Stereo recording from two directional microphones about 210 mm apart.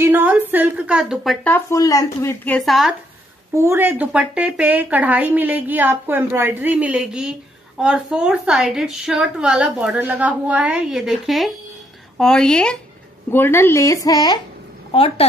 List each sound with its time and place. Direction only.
0.0 s a woman's voice: 10° right (ahead or behind)
3.5 s a woman's voice: 10° right (ahead or behind); by 15.2 s 25° left (ahead or behind)